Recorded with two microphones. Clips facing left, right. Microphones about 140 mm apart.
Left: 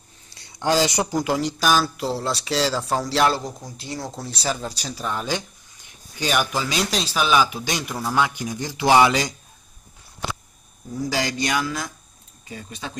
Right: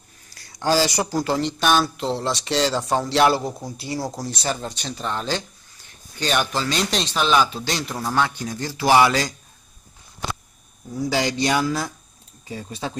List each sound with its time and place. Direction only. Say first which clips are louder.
0.3 s speech: right 1 dB; 25° left (ahead or behind); by 3.3 s centre (ahead or behind)
3.3 s speech: right 3 dB; 10° right (ahead or behind); by 9.3 s 15° left (ahead or behind)
11.2 s speech: right 3 dB; 30° right (ahead or behind)